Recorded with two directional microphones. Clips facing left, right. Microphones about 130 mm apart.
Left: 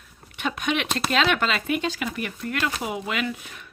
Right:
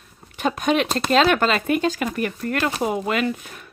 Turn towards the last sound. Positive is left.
turn(degrees=-45)  # may be behind; listen again after turning